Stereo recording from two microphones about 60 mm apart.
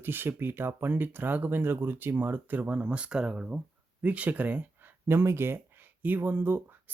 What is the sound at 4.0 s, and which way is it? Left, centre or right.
Speech, right.